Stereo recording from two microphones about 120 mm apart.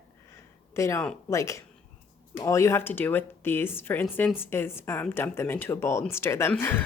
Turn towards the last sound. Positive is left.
turn(degrees=15)  # may be behind; listen again after turning